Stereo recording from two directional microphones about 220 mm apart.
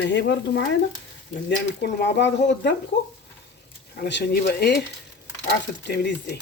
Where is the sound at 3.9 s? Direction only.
50° left (ahead or behind).